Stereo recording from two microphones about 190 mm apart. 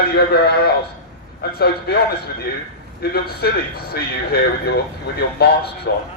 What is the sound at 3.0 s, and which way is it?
Speech, 55° left (ahead or behind).